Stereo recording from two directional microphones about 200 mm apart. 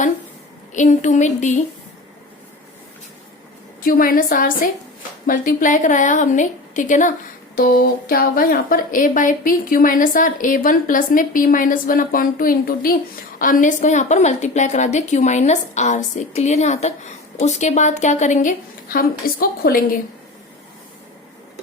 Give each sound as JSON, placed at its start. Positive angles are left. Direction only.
{"t": 0.7, "sound": "a woman's voice", "side_deg": 35}
{"t": 3.8, "sound": "a woman's voice", "side_deg": 45}